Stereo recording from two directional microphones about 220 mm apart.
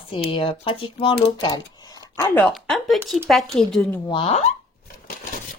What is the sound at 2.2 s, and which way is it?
Speech, 5° left (ahead or behind).